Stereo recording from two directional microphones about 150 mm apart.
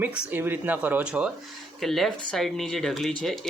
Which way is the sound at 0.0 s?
10° right (ahead or behind).